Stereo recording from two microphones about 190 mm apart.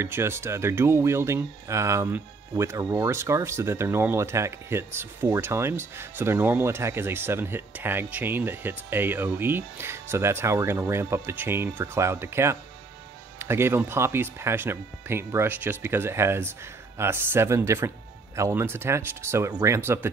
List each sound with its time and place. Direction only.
0.0 s speech: 15° right (ahead or behind)